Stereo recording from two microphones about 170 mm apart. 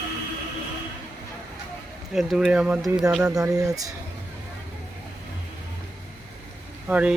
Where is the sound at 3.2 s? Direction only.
20° right (ahead or behind).